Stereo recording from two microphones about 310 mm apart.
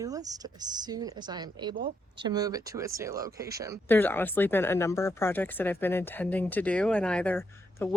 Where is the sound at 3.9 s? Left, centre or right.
Centre.